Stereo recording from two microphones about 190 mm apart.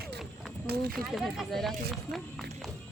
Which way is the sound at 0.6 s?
55° right (ahead or behind).